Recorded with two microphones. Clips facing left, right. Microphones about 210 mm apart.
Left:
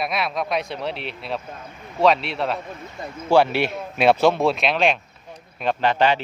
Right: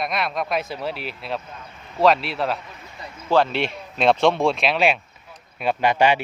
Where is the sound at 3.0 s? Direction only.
50° left (ahead or behind).